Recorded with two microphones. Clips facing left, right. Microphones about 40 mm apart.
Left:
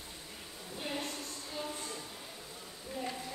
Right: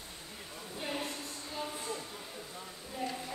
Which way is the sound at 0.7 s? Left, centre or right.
Centre.